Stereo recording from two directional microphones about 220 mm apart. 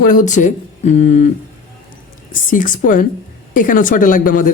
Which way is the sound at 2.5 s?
35° left (ahead or behind).